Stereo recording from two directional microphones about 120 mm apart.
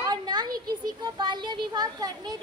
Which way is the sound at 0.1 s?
35° right (ahead or behind).